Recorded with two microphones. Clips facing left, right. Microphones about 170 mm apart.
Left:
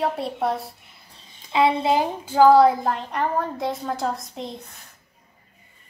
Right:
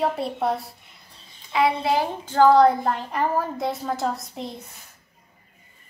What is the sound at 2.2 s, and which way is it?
A woman's voice, 10° left (ahead or behind).